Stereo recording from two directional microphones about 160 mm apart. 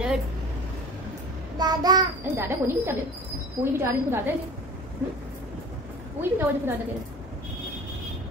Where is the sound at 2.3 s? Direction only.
15° right (ahead or behind).